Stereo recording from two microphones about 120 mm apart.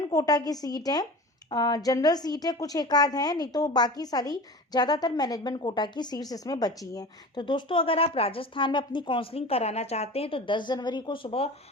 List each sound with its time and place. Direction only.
0.1 s a woman's voice: 30° left (ahead or behind); by 11.4 s 50° left (ahead or behind)